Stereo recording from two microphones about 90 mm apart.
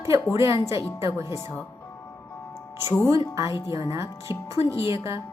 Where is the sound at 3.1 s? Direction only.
35° right (ahead or behind).